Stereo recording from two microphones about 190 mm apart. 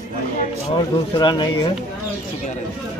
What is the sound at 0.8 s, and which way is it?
Speech, 25° left (ahead or behind).